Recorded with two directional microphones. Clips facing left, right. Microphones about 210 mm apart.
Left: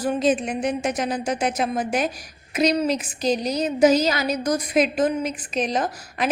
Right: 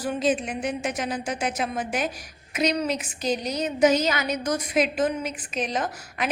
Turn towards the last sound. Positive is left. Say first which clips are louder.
# left 4 dB
turn(degrees=35)  # may be behind; listen again after turning